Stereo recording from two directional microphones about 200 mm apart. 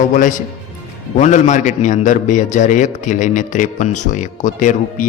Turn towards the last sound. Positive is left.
turn(degrees=40)  # may be behind; listen again after turning